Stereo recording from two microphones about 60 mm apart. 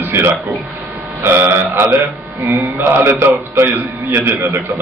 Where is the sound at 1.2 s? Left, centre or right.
Right.